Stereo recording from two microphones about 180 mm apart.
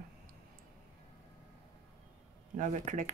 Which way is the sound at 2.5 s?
45° right (ahead or behind).